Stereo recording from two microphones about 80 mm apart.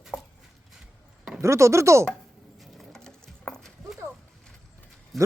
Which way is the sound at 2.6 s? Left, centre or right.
Centre.